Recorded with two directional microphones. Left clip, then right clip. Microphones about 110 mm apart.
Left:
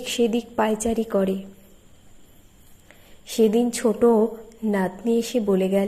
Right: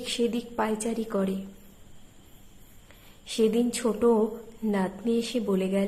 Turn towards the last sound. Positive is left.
turn(degrees=35)  # may be behind; listen again after turning